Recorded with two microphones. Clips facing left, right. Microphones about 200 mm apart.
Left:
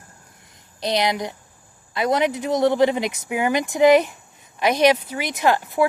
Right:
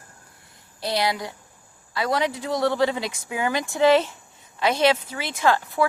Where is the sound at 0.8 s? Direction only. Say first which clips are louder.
Left 3 dB; 20° left (ahead or behind).